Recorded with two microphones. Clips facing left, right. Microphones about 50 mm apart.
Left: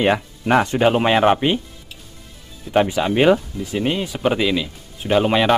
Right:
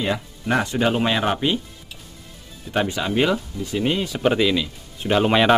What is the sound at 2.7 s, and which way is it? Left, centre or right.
Speech, left.